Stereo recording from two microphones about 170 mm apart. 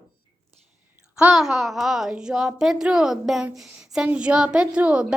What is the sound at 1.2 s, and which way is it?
A woman's voice, centre (ahead or behind).